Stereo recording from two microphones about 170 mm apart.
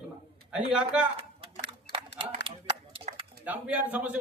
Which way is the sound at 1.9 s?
90° left.